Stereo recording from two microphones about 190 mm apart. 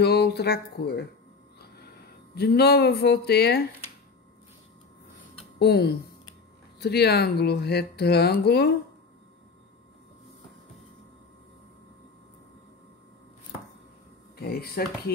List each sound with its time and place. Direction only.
0.0 s speech: 60° left (ahead or behind)
2.3 s speech: 60° left (ahead or behind)
5.6 s speech: 55° left (ahead or behind)
14.4 s speech: 55° left (ahead or behind)